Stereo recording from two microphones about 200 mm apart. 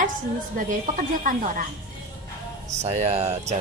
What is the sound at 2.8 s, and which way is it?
Speech, 35° right (ahead or behind).